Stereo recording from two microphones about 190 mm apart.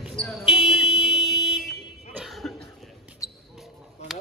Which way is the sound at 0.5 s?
Centre (ahead or behind).